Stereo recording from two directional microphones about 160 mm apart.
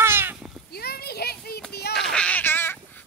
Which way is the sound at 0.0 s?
15° right (ahead or behind).